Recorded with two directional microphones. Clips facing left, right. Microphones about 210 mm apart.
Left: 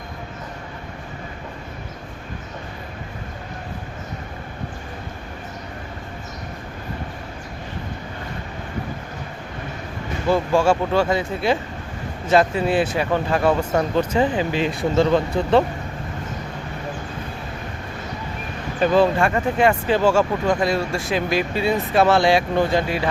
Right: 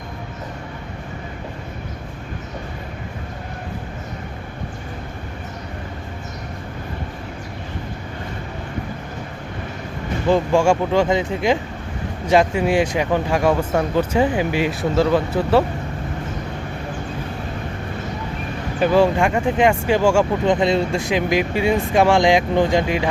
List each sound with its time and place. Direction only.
10.2 s speech: 15° right (ahead or behind)
18.8 s speech: 10° right (ahead or behind)